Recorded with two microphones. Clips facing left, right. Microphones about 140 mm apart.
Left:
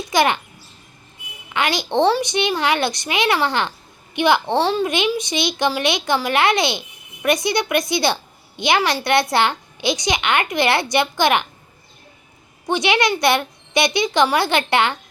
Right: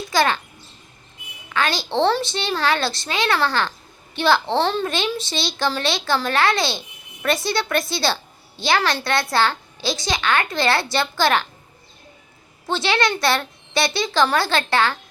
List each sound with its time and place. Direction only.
0.1 s a child's voice: 20° left (ahead or behind)
1.5 s a child's voice: 20° left (ahead or behind)
12.6 s a woman's voice: 15° left (ahead or behind)